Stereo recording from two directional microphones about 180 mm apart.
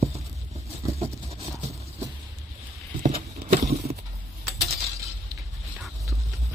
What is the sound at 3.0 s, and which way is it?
Horse, 40° right (ahead or behind).